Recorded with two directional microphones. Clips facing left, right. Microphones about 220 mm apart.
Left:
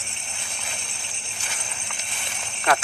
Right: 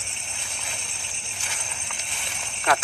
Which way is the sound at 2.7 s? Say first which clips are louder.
Left 1 dB; 45° left (ahead or behind).